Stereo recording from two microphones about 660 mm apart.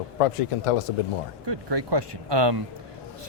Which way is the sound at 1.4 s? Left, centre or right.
Right.